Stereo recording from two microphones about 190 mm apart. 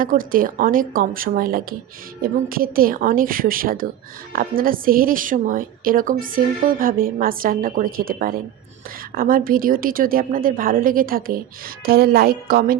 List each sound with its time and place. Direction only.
0.0 s a woman's voice: 45° right (ahead or behind)